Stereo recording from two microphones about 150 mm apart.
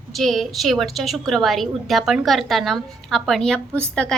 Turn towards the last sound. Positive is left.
turn(degrees=5)  # may be behind; listen again after turning